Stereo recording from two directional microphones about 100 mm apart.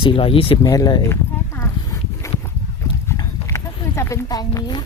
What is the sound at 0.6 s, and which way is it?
Speech, 35° left (ahead or behind).